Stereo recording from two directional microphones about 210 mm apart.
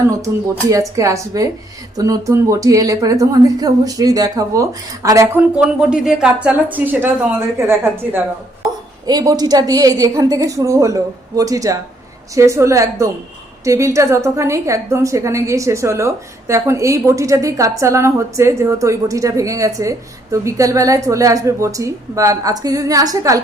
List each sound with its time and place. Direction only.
0.2 s a woman's voice: 15° right (ahead or behind)